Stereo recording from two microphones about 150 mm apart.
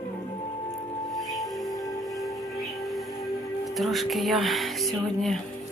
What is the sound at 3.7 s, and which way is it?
Speech, centre (ahead or behind).